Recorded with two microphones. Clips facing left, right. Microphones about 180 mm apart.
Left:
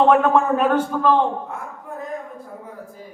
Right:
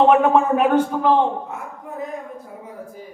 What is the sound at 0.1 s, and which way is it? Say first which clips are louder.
A man's voice: right 1 dB; 15° right (ahead or behind).